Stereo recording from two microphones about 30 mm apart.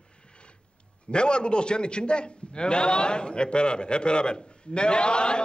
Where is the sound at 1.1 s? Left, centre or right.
Left.